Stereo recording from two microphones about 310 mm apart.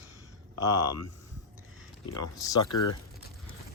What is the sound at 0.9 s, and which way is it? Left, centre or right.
Speech, left.